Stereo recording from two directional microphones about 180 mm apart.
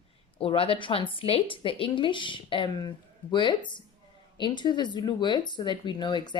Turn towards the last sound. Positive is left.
turn(degrees=25)  # may be behind; listen again after turning